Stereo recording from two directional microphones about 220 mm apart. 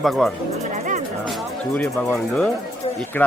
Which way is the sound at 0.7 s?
35° right (ahead or behind).